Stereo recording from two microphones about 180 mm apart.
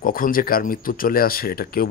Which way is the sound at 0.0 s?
50° left (ahead or behind).